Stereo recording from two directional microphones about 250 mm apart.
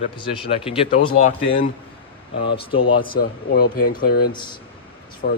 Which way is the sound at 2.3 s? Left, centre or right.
Left.